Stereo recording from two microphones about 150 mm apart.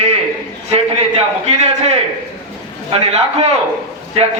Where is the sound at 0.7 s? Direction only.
45° right (ahead or behind).